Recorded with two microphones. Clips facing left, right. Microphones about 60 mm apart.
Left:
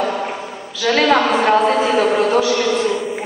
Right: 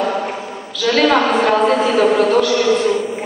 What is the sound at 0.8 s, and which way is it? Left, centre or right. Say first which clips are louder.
A woman's voice: right 1 dB; centre.